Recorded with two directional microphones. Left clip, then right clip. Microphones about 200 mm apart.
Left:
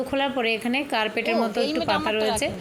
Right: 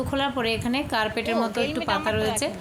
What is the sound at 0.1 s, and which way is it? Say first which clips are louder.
Speech: left 1 dB; 5° left (ahead or behind).